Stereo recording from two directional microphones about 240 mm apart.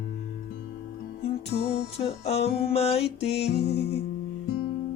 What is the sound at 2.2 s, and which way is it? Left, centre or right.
Music, left.